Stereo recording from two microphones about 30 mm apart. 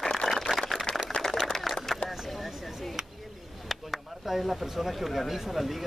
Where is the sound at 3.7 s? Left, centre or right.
Centre.